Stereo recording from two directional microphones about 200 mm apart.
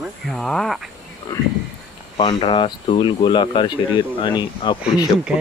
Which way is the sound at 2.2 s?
25° left (ahead or behind).